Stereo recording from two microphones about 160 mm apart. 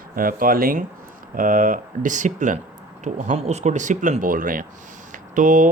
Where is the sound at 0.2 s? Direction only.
60° right (ahead or behind).